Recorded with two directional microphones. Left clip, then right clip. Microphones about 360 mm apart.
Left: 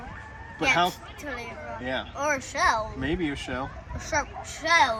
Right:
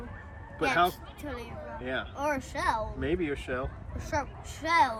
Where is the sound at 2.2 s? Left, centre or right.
Centre.